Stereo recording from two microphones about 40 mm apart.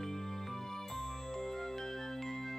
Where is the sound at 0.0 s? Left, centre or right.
Centre.